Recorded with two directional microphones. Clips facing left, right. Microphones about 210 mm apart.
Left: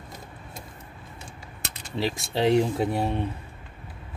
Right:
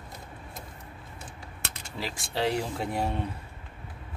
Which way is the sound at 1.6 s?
20° left (ahead or behind).